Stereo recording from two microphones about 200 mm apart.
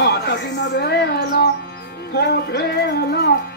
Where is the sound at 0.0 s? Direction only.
55° left (ahead or behind).